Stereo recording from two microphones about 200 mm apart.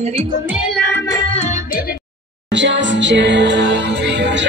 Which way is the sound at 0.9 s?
15° left (ahead or behind).